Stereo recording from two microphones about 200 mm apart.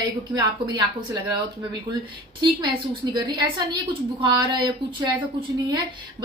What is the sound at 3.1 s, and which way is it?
Speech, 20° right (ahead or behind).